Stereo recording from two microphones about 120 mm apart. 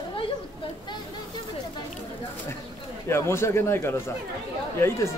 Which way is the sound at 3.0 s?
20° left (ahead or behind).